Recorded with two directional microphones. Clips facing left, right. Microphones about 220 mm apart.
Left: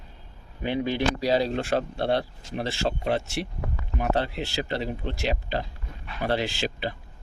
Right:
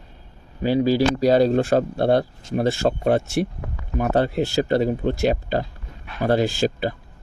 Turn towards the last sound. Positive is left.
turn(degrees=-45)  # may be behind; listen again after turning